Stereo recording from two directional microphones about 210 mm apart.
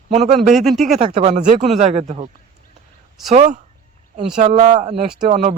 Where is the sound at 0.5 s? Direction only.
Centre (ahead or behind).